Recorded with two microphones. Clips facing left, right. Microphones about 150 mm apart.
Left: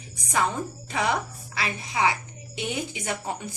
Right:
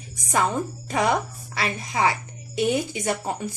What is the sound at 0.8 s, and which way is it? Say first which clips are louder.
Speech: right 4 dB; 40° right (ahead or behind).